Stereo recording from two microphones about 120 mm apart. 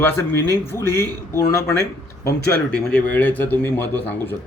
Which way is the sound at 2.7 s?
10° left (ahead or behind).